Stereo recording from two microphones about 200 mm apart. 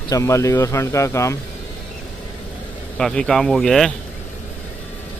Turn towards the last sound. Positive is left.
turn(degrees=0)  # may be behind; listen again after turning